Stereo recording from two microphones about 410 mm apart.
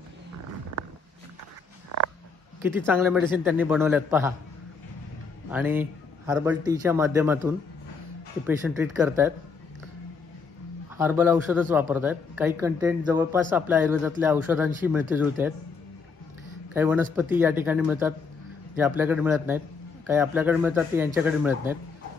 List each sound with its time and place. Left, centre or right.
1.9 s a sound: right
2.6 s speech: centre
5.5 s speech: centre
11.0 s speech: centre
16.7 s speech: centre